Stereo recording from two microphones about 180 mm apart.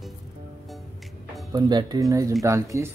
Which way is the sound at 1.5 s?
20° right (ahead or behind).